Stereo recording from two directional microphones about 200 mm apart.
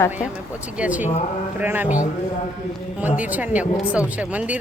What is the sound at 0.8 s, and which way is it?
Speech, 5° right (ahead or behind).